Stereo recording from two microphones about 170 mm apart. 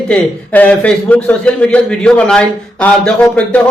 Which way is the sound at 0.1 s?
10° left (ahead or behind).